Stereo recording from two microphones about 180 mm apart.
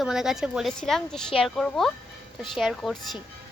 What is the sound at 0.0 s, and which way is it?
Speech, centre (ahead or behind).